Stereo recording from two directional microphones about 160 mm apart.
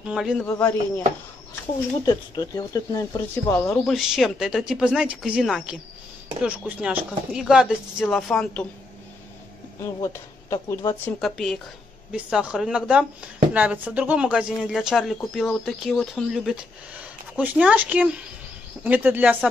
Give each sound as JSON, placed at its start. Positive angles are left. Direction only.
{"t": 0.0, "sound": "speech", "side_deg": -5}
{"t": 2.0, "sound": "speech", "side_deg": 25}
{"t": 3.6, "sound": "speech", "side_deg": 0}
{"t": 9.8, "sound": "speech", "side_deg": 20}
{"t": 11.1, "sound": "speech", "side_deg": 0}